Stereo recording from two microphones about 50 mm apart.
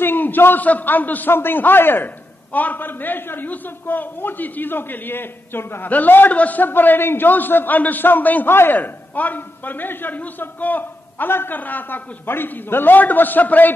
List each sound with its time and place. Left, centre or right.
0.0 s a man's voice: left
5.9 s a man's voice: left
8.5 s a man's voice: left
8.7 s a man's voice: left